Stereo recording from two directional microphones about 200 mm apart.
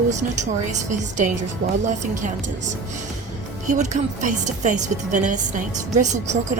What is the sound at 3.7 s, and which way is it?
A woman's voice, 35° right (ahead or behind).